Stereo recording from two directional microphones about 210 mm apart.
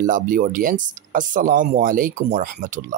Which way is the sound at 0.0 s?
40° right (ahead or behind).